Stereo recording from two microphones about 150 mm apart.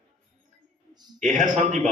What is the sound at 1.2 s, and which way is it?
Speech, 55° right (ahead or behind).